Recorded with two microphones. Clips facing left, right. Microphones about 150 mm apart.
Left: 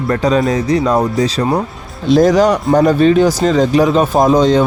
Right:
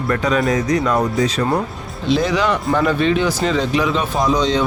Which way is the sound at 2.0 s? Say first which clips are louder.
Left 8 dB; 45° left (ahead or behind).